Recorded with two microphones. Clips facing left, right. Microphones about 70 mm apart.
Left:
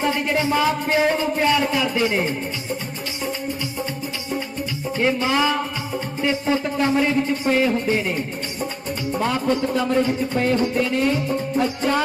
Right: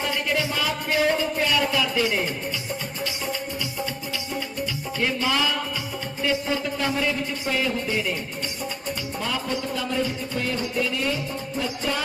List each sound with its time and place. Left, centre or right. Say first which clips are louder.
0.0 s music: left 4 dB; left
4.9 s music: left 5 dB; left